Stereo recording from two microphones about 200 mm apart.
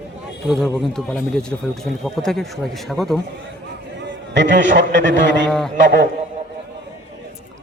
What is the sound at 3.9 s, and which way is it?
A man's voice, 60° right (ahead or behind).